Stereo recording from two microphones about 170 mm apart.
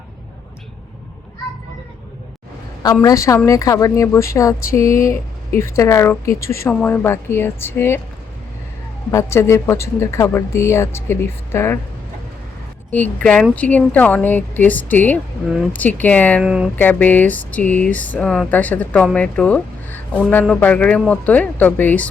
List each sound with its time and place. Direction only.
2.8 s a woman's voice: 20° left (ahead or behind)
9.1 s a woman's voice: 15° left (ahead or behind)
12.9 s a woman's voice: 10° left (ahead or behind)
16.4 s speech: 5° right (ahead or behind)
16.7 s a woman's voice: 10° left (ahead or behind)